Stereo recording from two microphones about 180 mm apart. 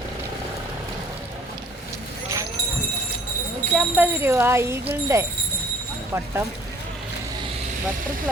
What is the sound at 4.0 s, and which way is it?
Speech, 15° right (ahead or behind).